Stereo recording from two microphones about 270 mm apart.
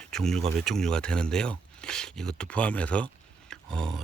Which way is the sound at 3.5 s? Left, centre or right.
Centre.